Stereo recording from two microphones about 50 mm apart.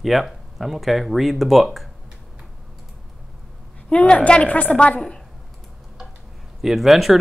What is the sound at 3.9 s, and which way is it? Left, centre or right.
A woman's voice, left.